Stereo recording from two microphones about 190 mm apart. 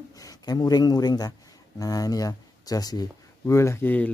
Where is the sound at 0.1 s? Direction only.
20° left (ahead or behind).